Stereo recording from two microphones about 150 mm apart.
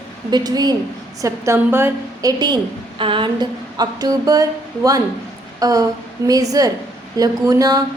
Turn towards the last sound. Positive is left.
turn(degrees=-25)  # may be behind; listen again after turning